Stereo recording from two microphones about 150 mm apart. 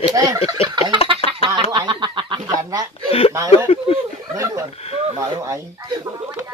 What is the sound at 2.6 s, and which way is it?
Chuckle, 25° right (ahead or behind).